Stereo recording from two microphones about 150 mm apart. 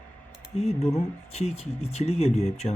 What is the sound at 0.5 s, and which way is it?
Speech, 45° left (ahead or behind).